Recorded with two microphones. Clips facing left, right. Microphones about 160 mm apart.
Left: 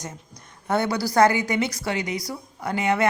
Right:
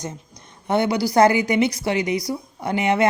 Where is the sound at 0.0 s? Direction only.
25° right (ahead or behind).